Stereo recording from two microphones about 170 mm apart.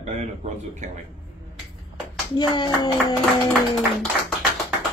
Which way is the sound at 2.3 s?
25° left (ahead or behind).